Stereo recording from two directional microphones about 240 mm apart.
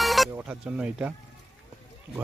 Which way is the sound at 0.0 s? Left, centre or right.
Centre.